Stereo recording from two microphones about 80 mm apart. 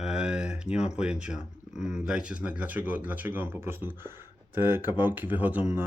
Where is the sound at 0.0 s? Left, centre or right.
Centre.